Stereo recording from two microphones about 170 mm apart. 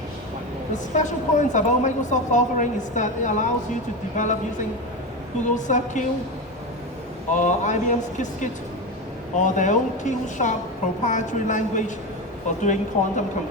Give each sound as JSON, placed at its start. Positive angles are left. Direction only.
{"t": 0.7, "sound": "a woman's voice", "side_deg": 45}
{"t": 5.5, "sound": "a woman's voice", "side_deg": 45}
{"t": 7.3, "sound": "a woman's voice", "side_deg": 45}